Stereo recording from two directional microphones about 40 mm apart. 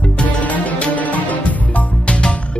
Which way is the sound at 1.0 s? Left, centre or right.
Left.